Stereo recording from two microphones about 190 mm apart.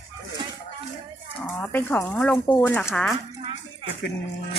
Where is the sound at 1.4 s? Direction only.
10° left (ahead or behind).